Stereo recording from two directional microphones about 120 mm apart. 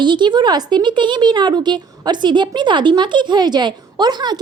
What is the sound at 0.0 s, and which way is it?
Speech, 40° right (ahead or behind).